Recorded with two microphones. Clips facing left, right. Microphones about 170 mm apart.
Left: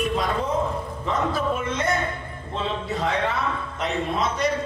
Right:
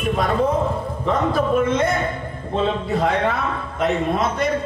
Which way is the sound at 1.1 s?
55° right (ahead or behind).